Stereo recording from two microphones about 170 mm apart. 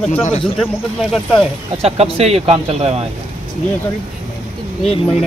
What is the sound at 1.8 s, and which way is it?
Speech, 35° right (ahead or behind).